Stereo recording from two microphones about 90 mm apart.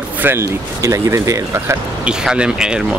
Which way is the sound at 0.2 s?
25° right (ahead or behind).